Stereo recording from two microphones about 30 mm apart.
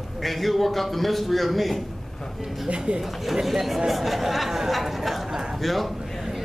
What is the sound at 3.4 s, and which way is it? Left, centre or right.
Speech, centre.